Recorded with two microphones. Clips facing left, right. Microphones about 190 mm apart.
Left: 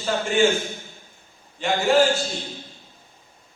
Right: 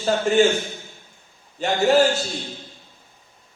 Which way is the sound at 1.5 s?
40° right (ahead or behind).